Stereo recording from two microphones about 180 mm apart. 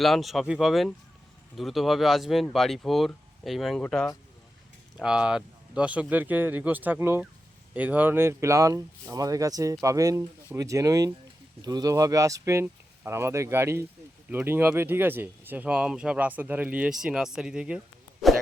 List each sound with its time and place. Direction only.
0.0 s speech: centre (ahead or behind)